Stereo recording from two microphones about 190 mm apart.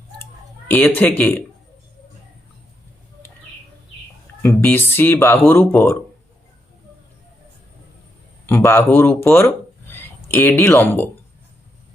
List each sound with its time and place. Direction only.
0.7 s speech: 10° left (ahead or behind)
4.4 s speech: 10° left (ahead or behind)
8.4 s speech: 15° left (ahead or behind)